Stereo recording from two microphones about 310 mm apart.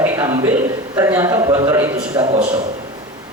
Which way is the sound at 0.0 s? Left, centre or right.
Centre.